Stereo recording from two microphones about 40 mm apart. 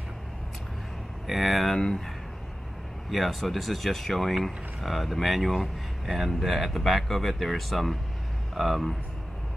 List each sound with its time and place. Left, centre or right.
1.2 s speech: centre
3.1 s speech: centre